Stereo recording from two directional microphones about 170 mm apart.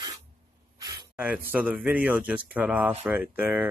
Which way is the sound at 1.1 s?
5° right (ahead or behind).